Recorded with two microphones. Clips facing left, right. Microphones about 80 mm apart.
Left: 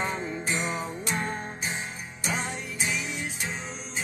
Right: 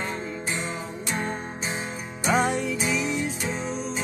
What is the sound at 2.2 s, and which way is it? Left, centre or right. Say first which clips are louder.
Music: right 9 dB; right.